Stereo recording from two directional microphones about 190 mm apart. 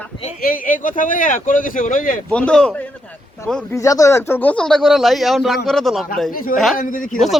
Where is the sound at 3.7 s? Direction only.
15° left (ahead or behind); by 6.1 s centre (ahead or behind).